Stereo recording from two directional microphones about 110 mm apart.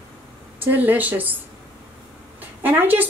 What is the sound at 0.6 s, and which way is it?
Speech, 15° right (ahead or behind).